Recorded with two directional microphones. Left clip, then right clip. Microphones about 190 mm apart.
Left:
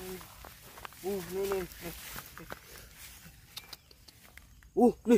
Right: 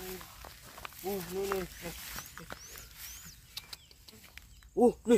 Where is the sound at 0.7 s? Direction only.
20° left (ahead or behind).